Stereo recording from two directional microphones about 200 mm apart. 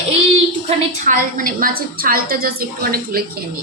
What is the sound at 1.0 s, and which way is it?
A woman's voice, 45° right (ahead or behind).